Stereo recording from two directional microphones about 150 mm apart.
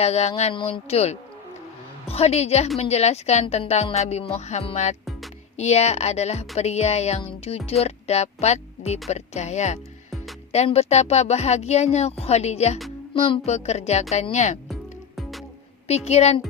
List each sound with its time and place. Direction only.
0.0 s speech: 45° left (ahead or behind)
14.7 s music: centre (ahead or behind)
15.9 s speech: 45° left (ahead or behind)